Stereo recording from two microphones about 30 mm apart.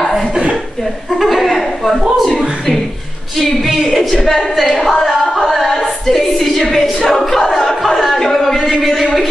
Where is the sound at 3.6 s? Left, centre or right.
Centre.